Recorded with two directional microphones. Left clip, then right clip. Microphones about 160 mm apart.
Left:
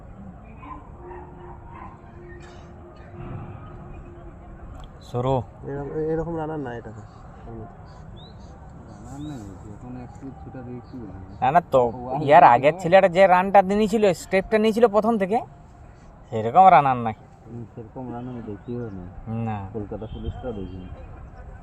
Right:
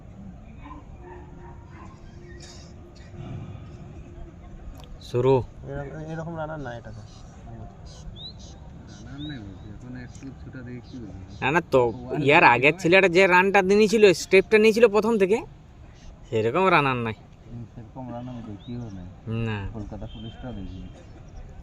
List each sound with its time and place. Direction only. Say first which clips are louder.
5.1 s speech: right 3 dB; 75° right (ahead or behind)
6.3 s speech: left 4 dB; 35° right (ahead or behind)
11.3 s speech: left 3 dB; 85° right
19.3 s speech: left 1 dB; 85° right